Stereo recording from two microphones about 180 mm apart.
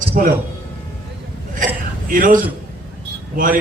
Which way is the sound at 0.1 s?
45° right (ahead or behind).